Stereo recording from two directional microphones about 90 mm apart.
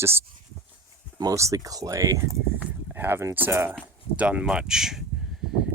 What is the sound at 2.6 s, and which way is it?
Speech, 25° right (ahead or behind).